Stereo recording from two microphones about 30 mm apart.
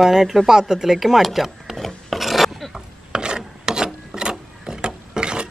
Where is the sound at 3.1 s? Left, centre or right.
Right.